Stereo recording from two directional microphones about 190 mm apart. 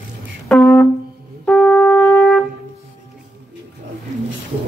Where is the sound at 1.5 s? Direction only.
5° left (ahead or behind).